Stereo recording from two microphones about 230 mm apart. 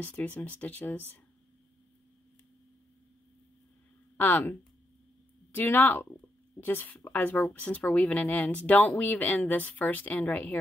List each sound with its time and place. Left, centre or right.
0.0 s speech: centre
4.2 s speech: centre